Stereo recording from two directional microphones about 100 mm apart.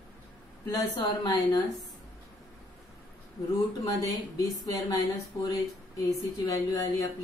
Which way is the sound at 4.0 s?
40° left (ahead or behind).